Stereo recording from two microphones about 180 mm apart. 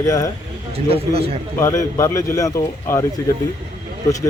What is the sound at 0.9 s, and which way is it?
Speech, 35° right (ahead or behind).